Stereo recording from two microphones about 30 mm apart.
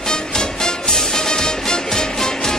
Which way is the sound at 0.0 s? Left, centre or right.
Centre.